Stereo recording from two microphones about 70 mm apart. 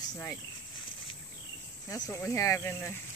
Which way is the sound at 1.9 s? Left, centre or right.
Left.